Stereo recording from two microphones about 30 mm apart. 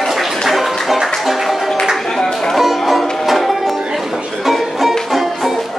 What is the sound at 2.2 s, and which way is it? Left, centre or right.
Music, centre.